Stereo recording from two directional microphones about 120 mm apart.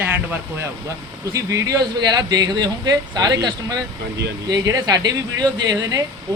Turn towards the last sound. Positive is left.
turn(degrees=-30)  # may be behind; listen again after turning